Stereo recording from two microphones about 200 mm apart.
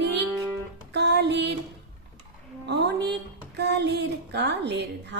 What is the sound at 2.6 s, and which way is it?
A woman's voice, 55° right (ahead or behind).